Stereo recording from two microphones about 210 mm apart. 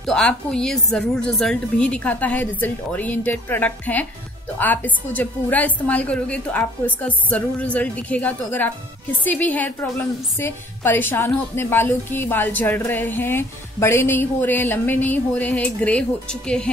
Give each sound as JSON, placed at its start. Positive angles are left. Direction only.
{"t": 0.0, "sound": "a woman's voice", "side_deg": 5}